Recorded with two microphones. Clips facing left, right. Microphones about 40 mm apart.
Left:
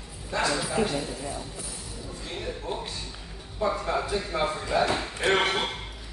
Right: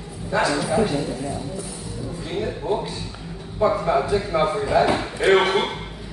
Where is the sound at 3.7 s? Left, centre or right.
Centre.